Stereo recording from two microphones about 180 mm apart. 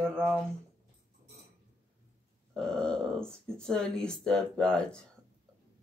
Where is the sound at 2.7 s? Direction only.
5° left (ahead or behind).